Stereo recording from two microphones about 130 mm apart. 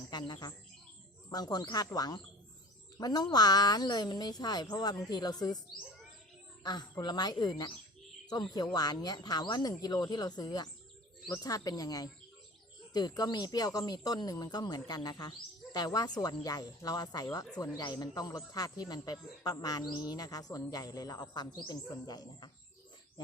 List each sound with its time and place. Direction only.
0.1 s speech: 35° left (ahead or behind)
6.6 s speech: 35° left (ahead or behind)